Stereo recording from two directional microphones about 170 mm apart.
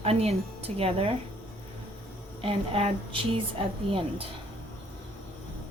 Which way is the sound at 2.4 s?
30° right (ahead or behind).